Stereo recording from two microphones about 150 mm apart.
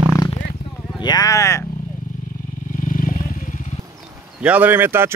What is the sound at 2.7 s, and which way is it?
Vehicle, 60° left (ahead or behind).